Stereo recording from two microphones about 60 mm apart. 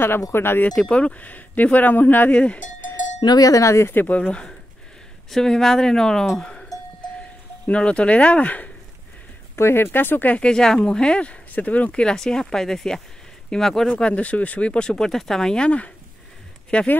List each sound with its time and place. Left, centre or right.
0.3 s speech: left
0.7 s speech: centre; by 2.3 s left
2.3 s speech: centre
3.3 s cowbell: left
3.6 s speech: left
3.9 s speech: left
4.2 s speech: centre
5.3 s speech: centre
7.6 s speech: centre
9.6 s speech: left
10.3 s speech: centre